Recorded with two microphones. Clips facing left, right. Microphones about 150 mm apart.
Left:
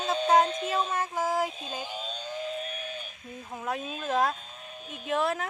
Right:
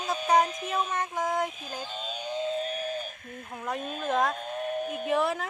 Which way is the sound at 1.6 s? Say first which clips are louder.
Left 1 dB; 20° left (ahead or behind).